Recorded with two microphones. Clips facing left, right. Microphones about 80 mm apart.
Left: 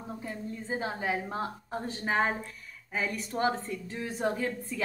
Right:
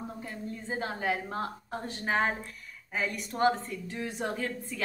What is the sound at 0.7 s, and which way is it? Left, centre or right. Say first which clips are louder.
A woman's voice: even; centre.